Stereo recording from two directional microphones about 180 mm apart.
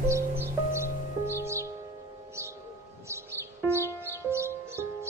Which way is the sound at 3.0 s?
15° right (ahead or behind).